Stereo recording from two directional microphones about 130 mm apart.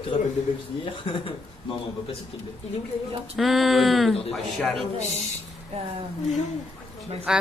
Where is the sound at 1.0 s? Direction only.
40° left (ahead or behind).